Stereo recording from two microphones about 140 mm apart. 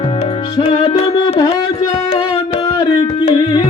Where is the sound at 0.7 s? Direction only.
40° left (ahead or behind).